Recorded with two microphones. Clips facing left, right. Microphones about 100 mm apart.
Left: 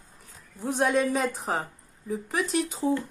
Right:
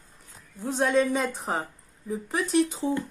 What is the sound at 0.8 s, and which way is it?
Speech, centre (ahead or behind).